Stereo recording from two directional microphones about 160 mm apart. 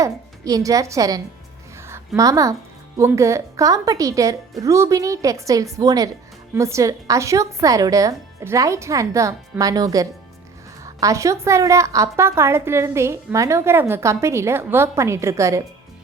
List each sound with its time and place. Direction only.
0.0 s a woman's voice: 20° right (ahead or behind)